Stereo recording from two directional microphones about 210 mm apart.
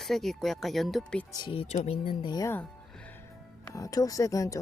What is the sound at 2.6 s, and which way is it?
Music, 5° left (ahead or behind).